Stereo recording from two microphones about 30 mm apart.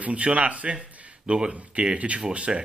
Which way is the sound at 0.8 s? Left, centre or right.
Right.